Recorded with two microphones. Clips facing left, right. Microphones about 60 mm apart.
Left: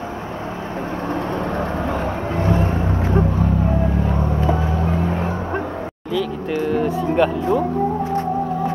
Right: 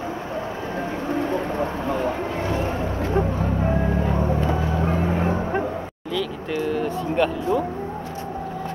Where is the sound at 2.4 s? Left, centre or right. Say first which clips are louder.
Left 7 dB; left.